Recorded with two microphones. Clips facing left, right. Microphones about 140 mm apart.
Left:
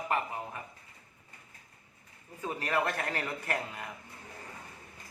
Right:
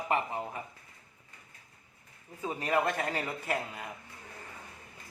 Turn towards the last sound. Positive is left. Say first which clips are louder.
# right 1 dB
turn(degrees=-10)  # may be behind; listen again after turning